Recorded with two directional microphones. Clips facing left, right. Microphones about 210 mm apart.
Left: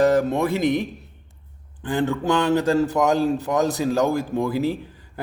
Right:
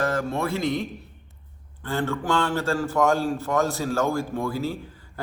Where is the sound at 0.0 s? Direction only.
15° left (ahead or behind).